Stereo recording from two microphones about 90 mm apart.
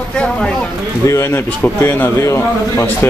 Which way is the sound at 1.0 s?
35° left (ahead or behind).